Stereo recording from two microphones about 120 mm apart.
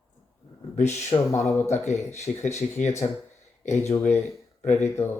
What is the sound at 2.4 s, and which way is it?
Speech, 70° left (ahead or behind).